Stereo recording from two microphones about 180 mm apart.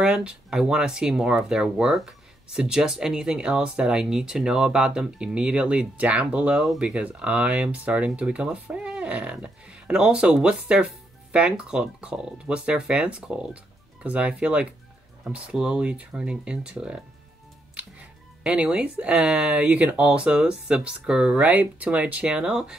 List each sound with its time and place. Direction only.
0.0 s speech: 5° right (ahead or behind)